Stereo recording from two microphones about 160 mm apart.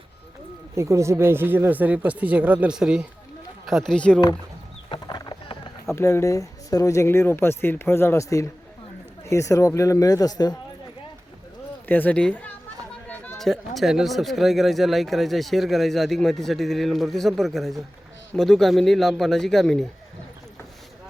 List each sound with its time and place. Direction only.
0.8 s speech: 20° right (ahead or behind); by 4.2 s 5° left (ahead or behind)
4.9 s clip-clop: 25° left (ahead or behind)
5.9 s speech: 15° left (ahead or behind)
11.9 s speech: 10° left (ahead or behind)